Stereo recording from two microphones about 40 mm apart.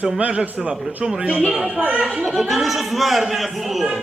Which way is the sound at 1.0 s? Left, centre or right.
Centre.